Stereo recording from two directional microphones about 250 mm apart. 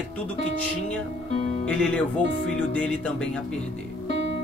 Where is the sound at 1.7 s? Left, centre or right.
Centre.